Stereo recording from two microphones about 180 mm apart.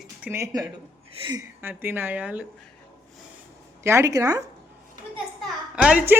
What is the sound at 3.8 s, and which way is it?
Speech, 15° right (ahead or behind).